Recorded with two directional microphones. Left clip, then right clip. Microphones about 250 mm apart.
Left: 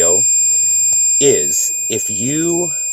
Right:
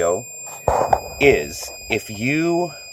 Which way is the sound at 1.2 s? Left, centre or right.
Centre.